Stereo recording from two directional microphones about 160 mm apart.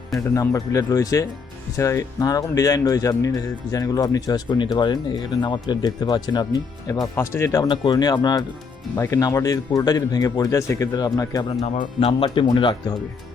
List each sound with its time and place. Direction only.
0.3 s speech: 20° left (ahead or behind)
11.6 s speech: 40° left (ahead or behind)